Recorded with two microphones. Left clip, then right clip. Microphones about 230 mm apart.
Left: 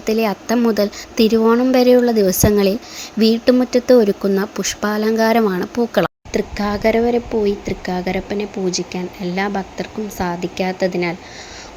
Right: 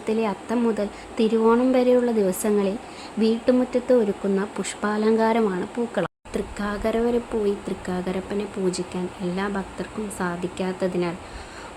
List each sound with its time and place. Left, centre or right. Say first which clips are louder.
0.0 s speech: left 6 dB; centre